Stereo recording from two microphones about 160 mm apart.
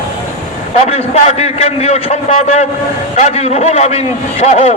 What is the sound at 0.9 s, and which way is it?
A man's voice, 45° left (ahead or behind).